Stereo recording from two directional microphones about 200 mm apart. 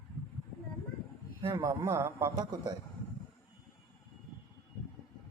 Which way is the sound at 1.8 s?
15° right (ahead or behind).